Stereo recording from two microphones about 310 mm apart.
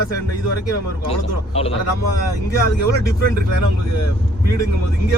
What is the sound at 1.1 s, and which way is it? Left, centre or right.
Speech, centre.